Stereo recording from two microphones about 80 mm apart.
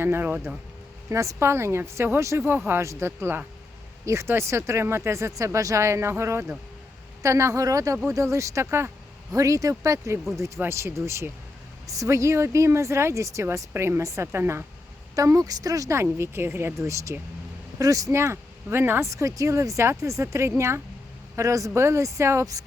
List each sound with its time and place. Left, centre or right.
0.0 s speech: right
1.1 s speech: right
2.4 s speech: right